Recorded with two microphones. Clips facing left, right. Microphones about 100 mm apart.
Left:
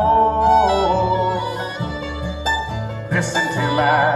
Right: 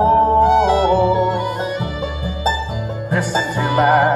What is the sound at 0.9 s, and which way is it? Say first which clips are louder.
Music: right 2 dB; 5° right (ahead or behind).